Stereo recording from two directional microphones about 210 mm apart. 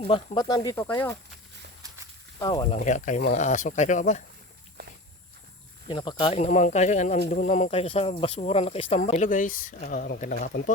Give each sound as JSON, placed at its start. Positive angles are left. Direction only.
{"t": 0.0, "sound": "speech", "side_deg": 25}
{"t": 2.4, "sound": "speech", "side_deg": 20}
{"t": 2.7, "sound": "speech", "side_deg": 35}
{"t": 4.8, "sound": "walk", "side_deg": -50}
{"t": 5.9, "sound": "speech", "side_deg": 20}